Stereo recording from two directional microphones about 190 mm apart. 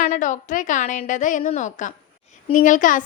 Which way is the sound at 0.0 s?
40° left (ahead or behind).